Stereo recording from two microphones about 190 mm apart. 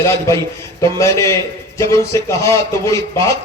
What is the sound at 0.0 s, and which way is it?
A man's voice, 15° left (ahead or behind).